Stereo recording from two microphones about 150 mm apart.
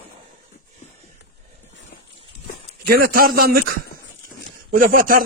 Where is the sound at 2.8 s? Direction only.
90° right.